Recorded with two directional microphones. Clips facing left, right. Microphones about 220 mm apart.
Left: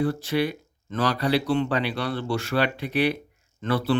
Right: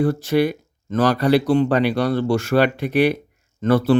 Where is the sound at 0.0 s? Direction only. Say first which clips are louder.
Right 6 dB; 45° right (ahead or behind).